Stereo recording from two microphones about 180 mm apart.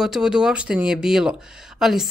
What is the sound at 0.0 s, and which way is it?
Speech, 5° right (ahead or behind).